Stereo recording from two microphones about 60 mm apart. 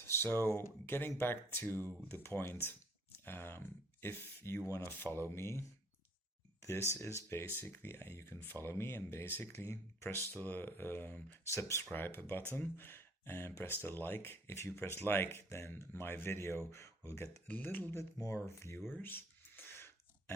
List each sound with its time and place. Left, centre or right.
0.1 s speech: left
6.6 s a sound: left
6.9 s speech: left
8.4 s speech: left
10.4 s speech: left
11.4 s speech: left
11.9 s speech: left
17.5 s speech: left
18.2 s speech: left
18.4 s speech: left
19.0 s a sound: left